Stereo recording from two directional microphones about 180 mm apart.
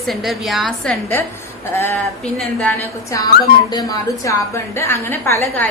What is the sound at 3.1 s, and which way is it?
A woman's voice, 20° left (ahead or behind).